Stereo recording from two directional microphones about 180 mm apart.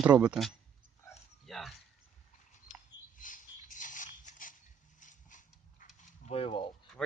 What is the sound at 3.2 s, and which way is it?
Mechanisms, 45° left (ahead or behind).